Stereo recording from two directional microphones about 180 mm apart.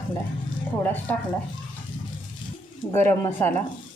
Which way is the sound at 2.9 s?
15° left (ahead or behind).